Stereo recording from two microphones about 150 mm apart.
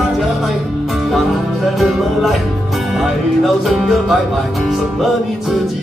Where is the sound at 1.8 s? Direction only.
Centre (ahead or behind).